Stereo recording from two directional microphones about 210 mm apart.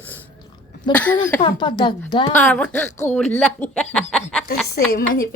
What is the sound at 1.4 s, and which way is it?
Speech, 20° left (ahead or behind).